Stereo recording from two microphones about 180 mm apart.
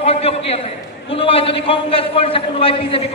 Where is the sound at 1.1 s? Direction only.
30° left (ahead or behind).